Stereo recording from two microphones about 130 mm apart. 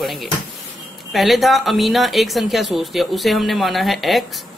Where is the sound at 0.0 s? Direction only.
Centre (ahead or behind).